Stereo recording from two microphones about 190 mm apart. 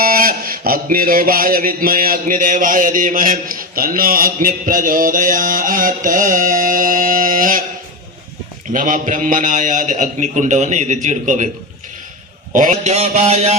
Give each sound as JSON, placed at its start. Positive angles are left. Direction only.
{"t": 0.0, "sound": "a sound", "side_deg": -50}
{"t": 8.7, "sound": "a man's voice", "side_deg": -45}
{"t": 12.5, "sound": "a man's voice", "side_deg": -40}